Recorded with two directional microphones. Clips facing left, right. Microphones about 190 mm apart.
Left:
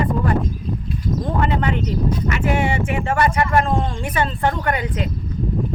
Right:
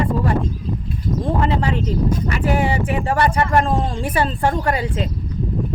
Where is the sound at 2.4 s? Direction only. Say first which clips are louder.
Right 2 dB; 35° right (ahead or behind).